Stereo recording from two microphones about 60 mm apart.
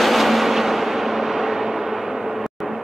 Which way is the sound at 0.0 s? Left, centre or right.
Centre.